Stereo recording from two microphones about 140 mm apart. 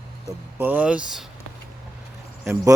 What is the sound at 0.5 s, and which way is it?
Speech, 15° right (ahead or behind).